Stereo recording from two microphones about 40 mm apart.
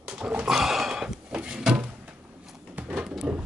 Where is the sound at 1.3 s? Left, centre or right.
Right.